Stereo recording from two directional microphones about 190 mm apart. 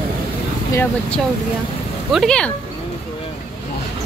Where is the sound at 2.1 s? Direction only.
Centre (ahead or behind).